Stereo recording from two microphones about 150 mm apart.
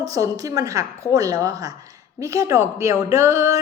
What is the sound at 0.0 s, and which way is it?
A woman's voice, 25° right (ahead or behind).